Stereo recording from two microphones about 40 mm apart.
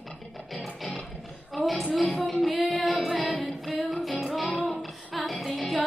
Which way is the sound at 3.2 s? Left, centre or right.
Left.